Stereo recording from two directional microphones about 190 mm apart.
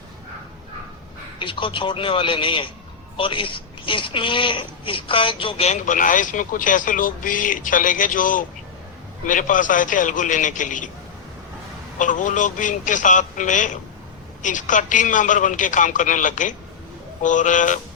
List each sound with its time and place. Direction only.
1.4 s speech: 25° left (ahead or behind); by 10.8 s 40° left (ahead or behind)
11.9 s a man's voice: 40° left (ahead or behind)